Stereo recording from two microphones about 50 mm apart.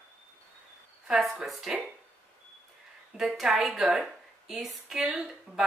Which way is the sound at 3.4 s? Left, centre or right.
Centre.